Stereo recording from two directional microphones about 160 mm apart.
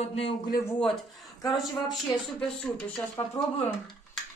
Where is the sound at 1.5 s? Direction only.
Centre (ahead or behind).